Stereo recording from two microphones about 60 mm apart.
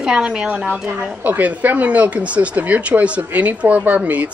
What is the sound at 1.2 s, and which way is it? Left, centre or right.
Speech, right.